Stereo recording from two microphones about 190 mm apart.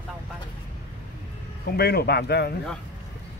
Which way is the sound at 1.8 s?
55° left (ahead or behind).